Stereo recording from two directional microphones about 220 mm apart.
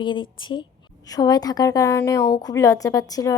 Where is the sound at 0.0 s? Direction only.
20° left (ahead or behind).